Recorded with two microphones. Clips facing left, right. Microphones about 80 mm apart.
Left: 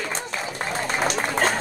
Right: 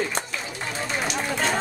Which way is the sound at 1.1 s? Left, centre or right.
Left.